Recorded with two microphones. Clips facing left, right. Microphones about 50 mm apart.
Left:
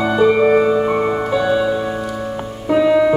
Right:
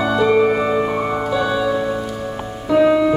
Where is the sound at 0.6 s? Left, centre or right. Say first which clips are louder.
Left 3 dB; centre.